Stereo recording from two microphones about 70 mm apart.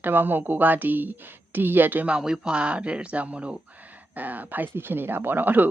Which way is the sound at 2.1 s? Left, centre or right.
Centre.